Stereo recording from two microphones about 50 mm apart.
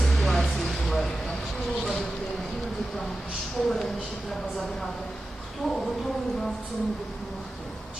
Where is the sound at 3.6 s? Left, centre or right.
Centre.